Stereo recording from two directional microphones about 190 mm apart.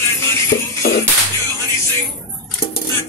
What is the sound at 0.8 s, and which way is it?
Music, 55° left (ahead or behind).